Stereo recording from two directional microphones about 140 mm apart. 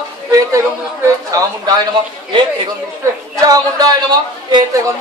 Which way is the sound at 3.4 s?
25° right (ahead or behind).